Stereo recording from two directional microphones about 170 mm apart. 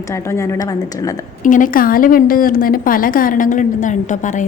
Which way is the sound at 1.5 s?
50° left (ahead or behind).